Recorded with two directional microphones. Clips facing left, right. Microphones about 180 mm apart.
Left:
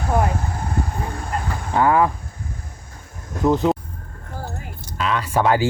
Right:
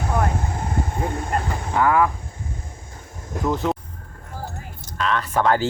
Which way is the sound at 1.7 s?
25° left (ahead or behind).